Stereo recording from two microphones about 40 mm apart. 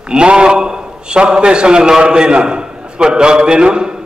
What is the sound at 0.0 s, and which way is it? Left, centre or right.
A man's voice, right.